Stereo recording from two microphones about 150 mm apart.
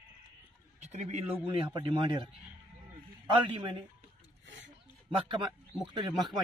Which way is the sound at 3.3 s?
30° right (ahead or behind).